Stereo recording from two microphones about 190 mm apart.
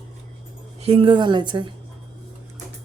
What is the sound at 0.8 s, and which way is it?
Speech, 30° right (ahead or behind).